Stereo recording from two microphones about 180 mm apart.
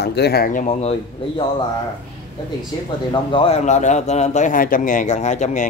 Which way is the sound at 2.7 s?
25° left (ahead or behind).